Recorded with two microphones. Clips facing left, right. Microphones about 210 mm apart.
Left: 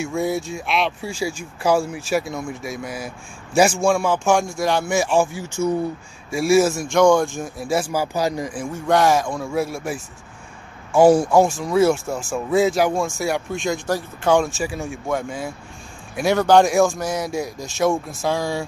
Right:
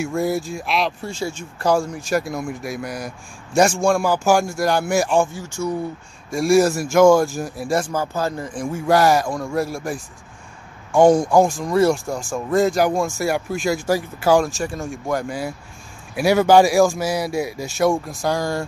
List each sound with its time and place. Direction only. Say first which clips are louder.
0.0 s speech: right 1 dB; centre (ahead or behind)
5.6 s speech: left 3 dB; 20° left (ahead or behind)
6.3 s speech: right 1 dB; 5° left (ahead or behind)
8.7 s speech: right 1 dB; 5° right (ahead or behind)